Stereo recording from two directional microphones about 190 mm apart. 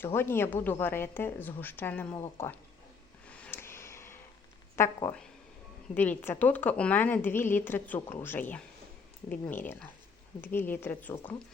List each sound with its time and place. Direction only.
0.0 s speech: 10° left (ahead or behind)
3.2 s a sound: 10° left (ahead or behind)
4.8 s speech: 15° left (ahead or behind)